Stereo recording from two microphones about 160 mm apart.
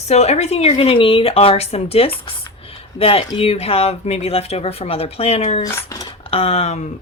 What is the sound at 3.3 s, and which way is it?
A woman's voice, 40° left (ahead or behind).